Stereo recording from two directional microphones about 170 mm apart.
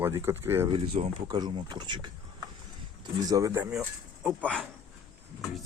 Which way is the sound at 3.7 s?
5° right (ahead or behind).